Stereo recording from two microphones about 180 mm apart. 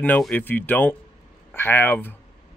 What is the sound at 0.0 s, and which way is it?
Speech, 10° left (ahead or behind).